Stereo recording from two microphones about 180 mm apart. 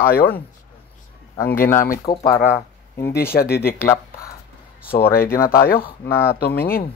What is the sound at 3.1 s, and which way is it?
Speech, 60° left (ahead or behind).